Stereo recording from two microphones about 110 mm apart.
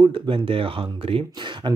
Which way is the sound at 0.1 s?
55° right (ahead or behind).